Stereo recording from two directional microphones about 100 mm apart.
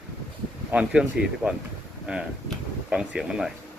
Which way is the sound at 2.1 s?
10° right (ahead or behind).